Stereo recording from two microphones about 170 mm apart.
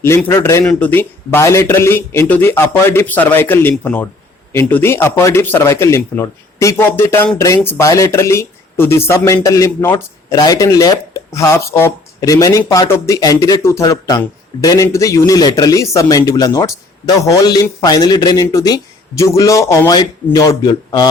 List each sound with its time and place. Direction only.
0.0 s a man's voice: 15° left (ahead or behind)